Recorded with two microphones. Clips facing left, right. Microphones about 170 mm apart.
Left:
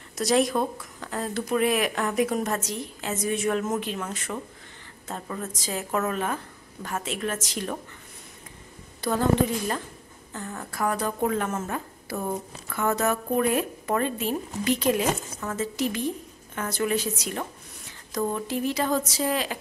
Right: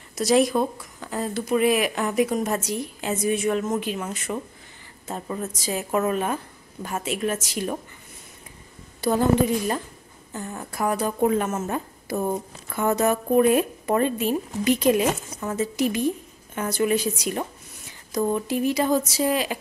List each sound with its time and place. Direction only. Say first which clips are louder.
0.1 s a woman's voice: right 3 dB; centre (ahead or behind)
3.8 s a woman's voice: right 3 dB; 10° right (ahead or behind)
9.0 s a woman's voice: right 4 dB; 10° right (ahead or behind)
10.3 s a woman's voice: right 2 dB; 15° right (ahead or behind)